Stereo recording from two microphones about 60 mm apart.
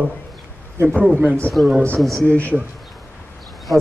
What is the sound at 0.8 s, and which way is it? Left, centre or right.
Speech, right.